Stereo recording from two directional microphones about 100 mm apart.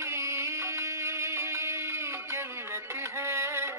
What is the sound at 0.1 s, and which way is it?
Music, 30° right (ahead or behind).